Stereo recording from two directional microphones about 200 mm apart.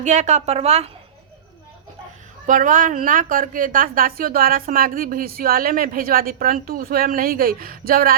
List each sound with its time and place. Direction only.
0.0 s a woman's voice: 35° right (ahead or behind)
2.5 s a woman's voice: 40° right (ahead or behind)